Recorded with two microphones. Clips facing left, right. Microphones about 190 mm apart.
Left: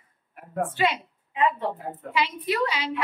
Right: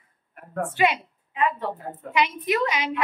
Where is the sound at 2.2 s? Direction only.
15° right (ahead or behind).